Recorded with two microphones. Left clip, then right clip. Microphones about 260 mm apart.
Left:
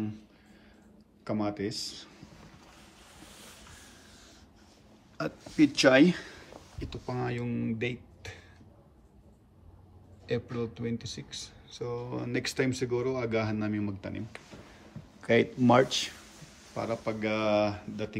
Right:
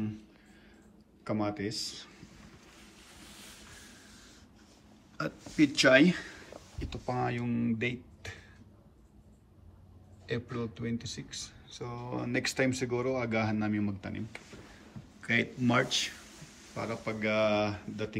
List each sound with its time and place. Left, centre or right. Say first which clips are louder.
1.2 s speech: left 1 dB; centre
5.1 s speech: left 2 dB; centre
10.2 s speech: left 3 dB; centre
15.1 s speech: left 5 dB; centre